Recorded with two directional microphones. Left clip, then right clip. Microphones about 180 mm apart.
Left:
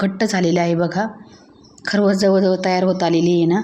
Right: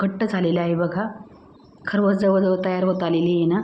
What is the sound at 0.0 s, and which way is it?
A woman's voice, 25° left (ahead or behind).